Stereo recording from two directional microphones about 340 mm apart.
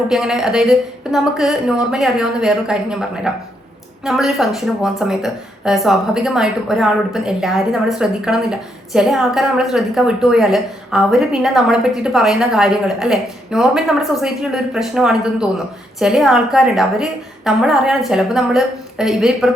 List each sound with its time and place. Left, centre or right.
0.1 s a woman's voice: centre